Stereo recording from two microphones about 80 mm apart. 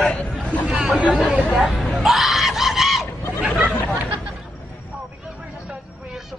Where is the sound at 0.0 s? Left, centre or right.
Centre.